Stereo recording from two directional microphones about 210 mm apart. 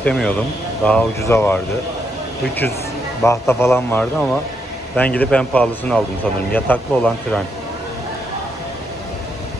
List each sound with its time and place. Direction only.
0.0 s speech: 5° left (ahead or behind)
3.2 s a man's voice: 15° left (ahead or behind)